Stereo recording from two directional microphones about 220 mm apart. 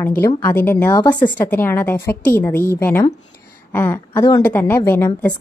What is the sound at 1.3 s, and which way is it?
A woman's voice, 10° left (ahead or behind).